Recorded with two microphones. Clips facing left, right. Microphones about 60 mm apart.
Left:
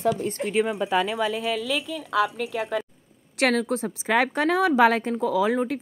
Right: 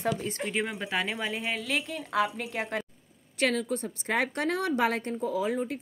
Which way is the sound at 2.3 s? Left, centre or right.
Left.